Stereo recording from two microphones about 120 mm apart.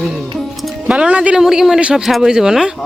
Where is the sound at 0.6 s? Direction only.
10° right (ahead or behind).